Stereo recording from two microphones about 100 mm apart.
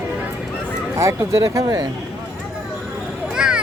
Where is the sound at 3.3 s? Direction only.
5° right (ahead or behind).